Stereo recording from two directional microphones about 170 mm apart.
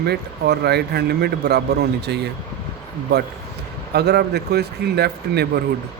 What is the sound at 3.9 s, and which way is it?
Speech, 70° right (ahead or behind).